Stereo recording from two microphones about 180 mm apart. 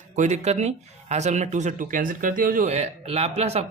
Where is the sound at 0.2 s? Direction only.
40° right (ahead or behind).